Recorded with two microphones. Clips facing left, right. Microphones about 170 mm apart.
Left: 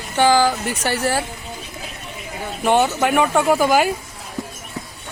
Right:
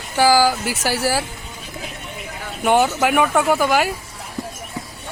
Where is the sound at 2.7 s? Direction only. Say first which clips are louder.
Even; 5° right (ahead or behind).